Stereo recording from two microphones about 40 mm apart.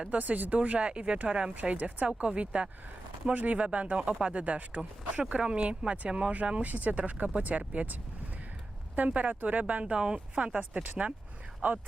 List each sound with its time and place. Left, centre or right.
0.1 s speech: right
1.5 s speech: right
3.3 s speech: right
5.3 s speech: right
6.3 s speech: right
9.0 s speech: right
9.9 s speech: right
11.6 s speech: right